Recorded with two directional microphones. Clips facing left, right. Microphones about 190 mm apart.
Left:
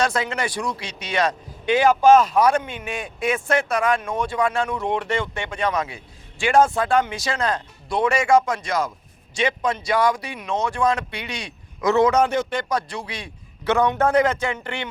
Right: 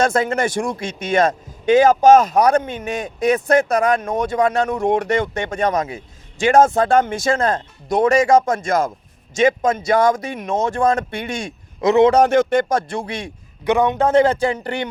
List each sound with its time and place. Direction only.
0.0 s a man's voice: 50° right (ahead or behind)
11.8 s speech: 20° right (ahead or behind)
12.5 s a man's voice: 50° right (ahead or behind)
13.7 s speech: 20° right (ahead or behind); by 14.8 s 40° right (ahead or behind)